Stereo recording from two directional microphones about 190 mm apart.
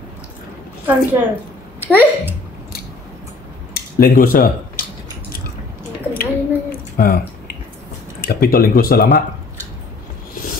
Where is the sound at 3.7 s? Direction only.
50° left (ahead or behind).